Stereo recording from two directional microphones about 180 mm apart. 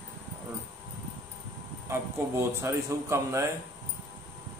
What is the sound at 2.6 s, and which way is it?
Speech, 15° right (ahead or behind).